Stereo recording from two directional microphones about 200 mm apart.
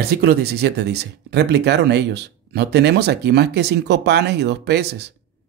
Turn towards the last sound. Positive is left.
turn(degrees=-55)  # may be behind; listen again after turning